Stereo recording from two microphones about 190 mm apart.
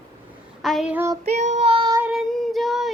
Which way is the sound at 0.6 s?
Centre (ahead or behind).